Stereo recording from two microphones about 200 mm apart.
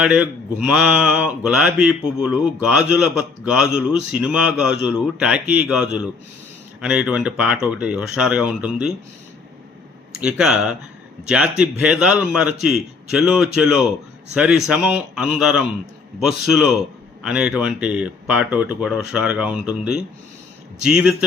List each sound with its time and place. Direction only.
0.0 s speech: 5° right (ahead or behind)
10.2 s speech: 5° right (ahead or behind)